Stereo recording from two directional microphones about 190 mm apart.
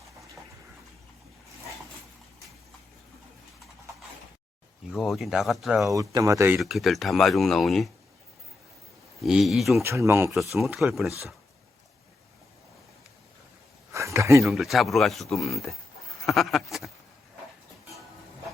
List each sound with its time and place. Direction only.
4.9 s speech: centre (ahead or behind)
5.9 s speech: 15° right (ahead or behind)
6.6 s speech: centre (ahead or behind)
9.2 s speech: centre (ahead or behind)
9.8 s speech: 15° right (ahead or behind)
10.2 s speech: centre (ahead or behind)
13.9 s a sound: 15° right (ahead or behind)
14.4 s speech: centre (ahead or behind)
16.2 s a sound: centre (ahead or behind)